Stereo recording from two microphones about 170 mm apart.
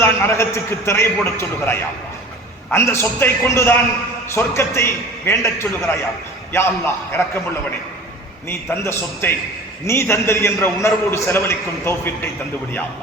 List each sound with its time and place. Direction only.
0.0 s a man's voice: 15° left (ahead or behind)
8.4 s a man's voice: 15° left (ahead or behind)